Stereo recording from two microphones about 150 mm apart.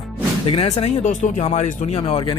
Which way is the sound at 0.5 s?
45° left (ahead or behind).